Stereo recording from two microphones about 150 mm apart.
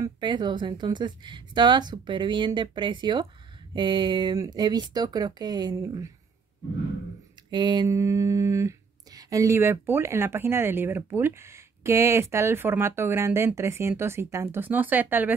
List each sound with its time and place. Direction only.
0.0 s a woman's voice: 30° right (ahead or behind)
7.5 s speech: 30° right (ahead or behind); by 15.3 s 10° right (ahead or behind)